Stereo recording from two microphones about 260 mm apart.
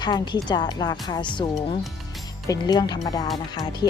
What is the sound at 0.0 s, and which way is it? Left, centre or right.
Speech, centre.